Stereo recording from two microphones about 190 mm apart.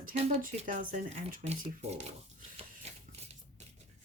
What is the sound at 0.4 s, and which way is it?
Speech, 45° right (ahead or behind).